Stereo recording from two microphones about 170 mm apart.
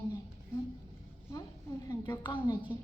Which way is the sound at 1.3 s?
20° left (ahead or behind).